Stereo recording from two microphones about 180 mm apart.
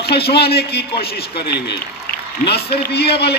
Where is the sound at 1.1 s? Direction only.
65° left (ahead or behind).